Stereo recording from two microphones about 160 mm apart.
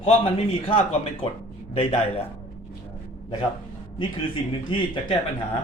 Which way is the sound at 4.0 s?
30° left (ahead or behind).